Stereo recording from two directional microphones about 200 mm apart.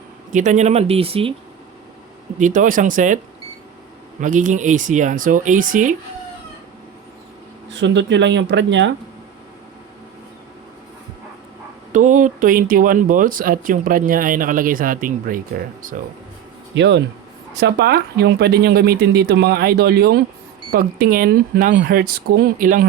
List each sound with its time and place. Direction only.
0.3 s speech: 40° right (ahead or behind)
2.4 s speech: 40° right (ahead or behind)
4.2 s speech: 40° right (ahead or behind)
7.7 s speech: 65° right (ahead or behind)
11.9 s speech: 40° right (ahead or behind)
16.7 s speech: 65° right (ahead or behind); by 22.9 s 40° right (ahead or behind)